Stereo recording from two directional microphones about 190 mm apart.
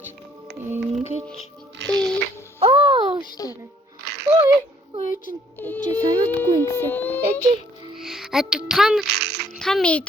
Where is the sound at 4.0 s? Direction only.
55° right (ahead or behind).